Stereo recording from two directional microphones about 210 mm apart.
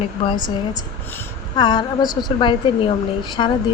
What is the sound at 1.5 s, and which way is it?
Speech, 20° left (ahead or behind).